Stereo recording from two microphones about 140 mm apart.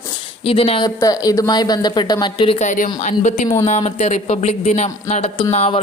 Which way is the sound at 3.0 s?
55° left (ahead or behind).